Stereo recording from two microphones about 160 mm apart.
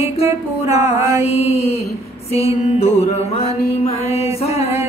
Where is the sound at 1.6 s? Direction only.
40° left (ahead or behind).